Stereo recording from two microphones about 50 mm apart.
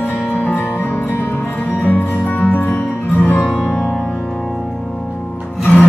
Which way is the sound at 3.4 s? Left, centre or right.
Centre.